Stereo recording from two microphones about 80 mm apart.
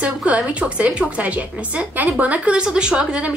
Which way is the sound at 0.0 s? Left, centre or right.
Centre.